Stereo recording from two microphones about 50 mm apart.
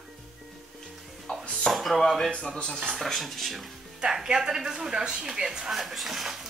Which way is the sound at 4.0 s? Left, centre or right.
Centre.